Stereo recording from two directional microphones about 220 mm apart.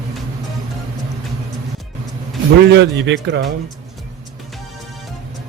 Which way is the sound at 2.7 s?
55° right (ahead or behind).